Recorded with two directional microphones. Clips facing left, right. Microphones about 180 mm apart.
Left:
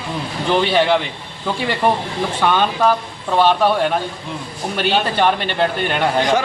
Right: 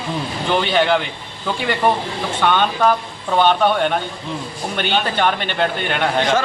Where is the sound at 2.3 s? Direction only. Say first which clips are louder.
Even; 5° left (ahead or behind).